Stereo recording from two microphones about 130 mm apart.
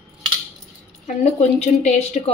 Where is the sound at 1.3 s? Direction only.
60° left (ahead or behind).